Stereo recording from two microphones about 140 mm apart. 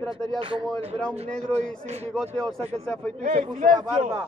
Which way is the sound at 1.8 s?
50° right (ahead or behind).